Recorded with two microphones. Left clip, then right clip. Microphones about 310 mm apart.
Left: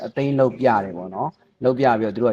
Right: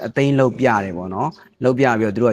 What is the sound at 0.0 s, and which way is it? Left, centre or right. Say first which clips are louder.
Speech: right 2 dB; right.